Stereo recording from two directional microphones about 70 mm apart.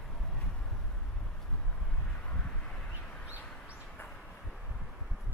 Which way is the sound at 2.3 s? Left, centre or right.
Centre.